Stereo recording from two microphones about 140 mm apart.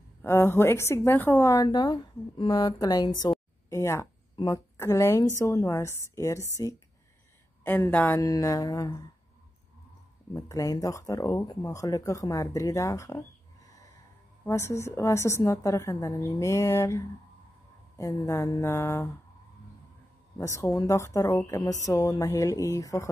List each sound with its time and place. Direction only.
0.2 s speech: 15° left (ahead or behind)
4.4 s speech: 35° left (ahead or behind)
4.7 s a woman's voice: 20° left (ahead or behind)
8.1 s speech: 25° left (ahead or behind)
10.3 s speech: 25° left (ahead or behind)
14.4 s speech: 20° left (ahead or behind)
20.3 s speech: 20° left (ahead or behind)